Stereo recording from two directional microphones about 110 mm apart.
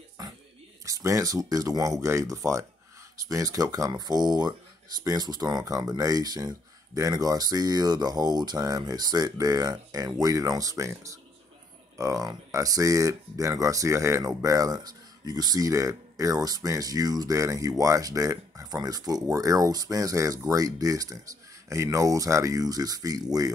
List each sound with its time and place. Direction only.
0.2 s music: 35° right (ahead or behind)
0.8 s speech: 30° right (ahead or behind)